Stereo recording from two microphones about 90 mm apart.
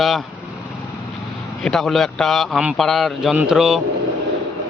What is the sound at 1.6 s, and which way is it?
A man's voice, 5° left (ahead or behind).